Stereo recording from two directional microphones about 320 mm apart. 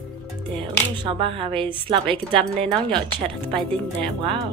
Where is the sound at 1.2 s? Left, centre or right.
Centre.